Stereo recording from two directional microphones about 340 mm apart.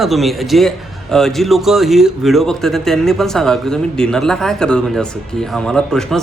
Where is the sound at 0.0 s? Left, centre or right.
Centre.